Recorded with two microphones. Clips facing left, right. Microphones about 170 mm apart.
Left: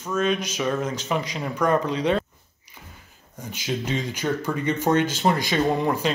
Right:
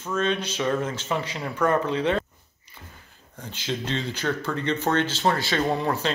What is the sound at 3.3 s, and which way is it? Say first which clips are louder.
Speech: left 2 dB; 10° left (ahead or behind).